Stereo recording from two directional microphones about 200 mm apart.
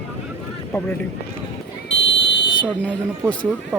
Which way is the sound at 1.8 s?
65° left (ahead or behind).